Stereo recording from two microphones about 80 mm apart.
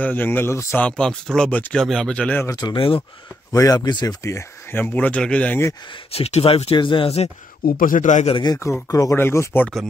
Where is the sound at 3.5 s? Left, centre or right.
Left.